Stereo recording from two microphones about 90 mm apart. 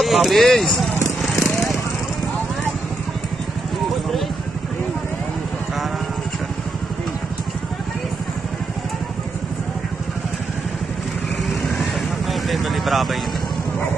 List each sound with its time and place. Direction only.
0.0 s speech: centre (ahead or behind)
1.0 s a sound: centre (ahead or behind)
11.8 s vehicle: centre (ahead or behind)